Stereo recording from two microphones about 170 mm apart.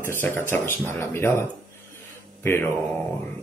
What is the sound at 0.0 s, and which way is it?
Speech, 10° left (ahead or behind).